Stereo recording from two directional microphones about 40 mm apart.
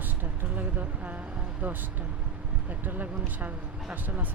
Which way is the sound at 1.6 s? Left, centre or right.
Right.